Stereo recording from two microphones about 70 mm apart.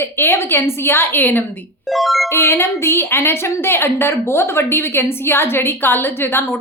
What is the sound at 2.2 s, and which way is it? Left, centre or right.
A woman's voice, left.